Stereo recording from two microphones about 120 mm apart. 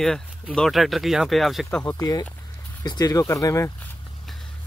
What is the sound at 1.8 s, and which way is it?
Speech, 30° left (ahead or behind).